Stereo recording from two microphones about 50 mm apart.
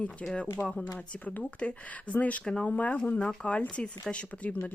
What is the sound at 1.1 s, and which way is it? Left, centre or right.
Speech, left.